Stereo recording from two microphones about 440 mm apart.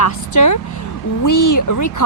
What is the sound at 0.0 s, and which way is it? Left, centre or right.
Speech, left.